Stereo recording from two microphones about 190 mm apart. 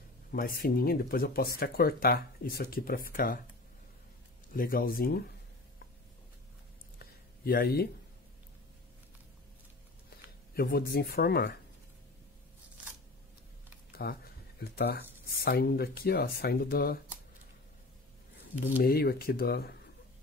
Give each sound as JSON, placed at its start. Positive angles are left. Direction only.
{"t": 0.3, "sound": "speech", "side_deg": 50}
{"t": 4.6, "sound": "speech", "side_deg": 50}
{"t": 7.0, "sound": "a sound", "side_deg": 50}
{"t": 10.5, "sound": "speech", "side_deg": 55}
{"t": 13.9, "sound": "speech", "side_deg": 55}
{"t": 18.8, "sound": "speech", "side_deg": 55}